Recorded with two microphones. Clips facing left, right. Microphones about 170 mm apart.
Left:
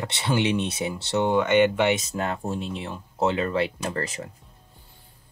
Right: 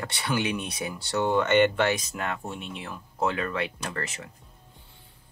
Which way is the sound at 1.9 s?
30° left (ahead or behind).